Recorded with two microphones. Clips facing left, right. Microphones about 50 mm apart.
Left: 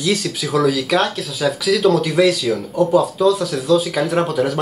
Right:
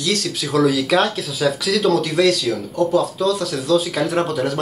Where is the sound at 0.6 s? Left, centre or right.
Centre.